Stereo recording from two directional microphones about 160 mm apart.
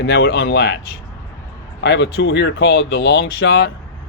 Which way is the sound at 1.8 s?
90° left.